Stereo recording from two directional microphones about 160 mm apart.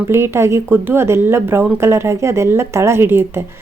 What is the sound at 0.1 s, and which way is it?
Speech, 15° right (ahead or behind).